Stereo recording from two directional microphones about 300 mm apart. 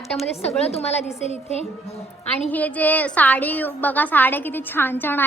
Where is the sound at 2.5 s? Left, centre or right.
Centre.